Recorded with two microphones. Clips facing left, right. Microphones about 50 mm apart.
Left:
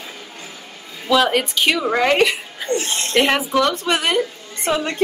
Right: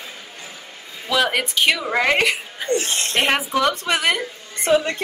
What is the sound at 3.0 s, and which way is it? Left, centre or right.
Speech, right.